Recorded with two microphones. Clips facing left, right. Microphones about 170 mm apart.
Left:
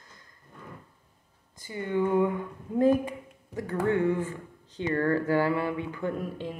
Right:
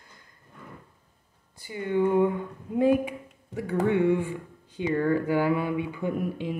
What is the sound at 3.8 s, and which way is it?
Speech, 20° right (ahead or behind).